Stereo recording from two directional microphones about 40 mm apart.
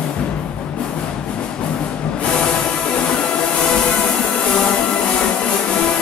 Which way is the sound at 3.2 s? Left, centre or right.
Centre.